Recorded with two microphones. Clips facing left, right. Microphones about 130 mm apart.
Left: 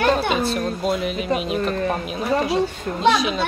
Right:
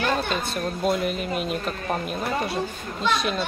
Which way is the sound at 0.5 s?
Centre (ahead or behind).